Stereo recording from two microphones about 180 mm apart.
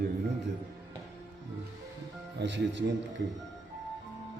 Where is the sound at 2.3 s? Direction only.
80° right.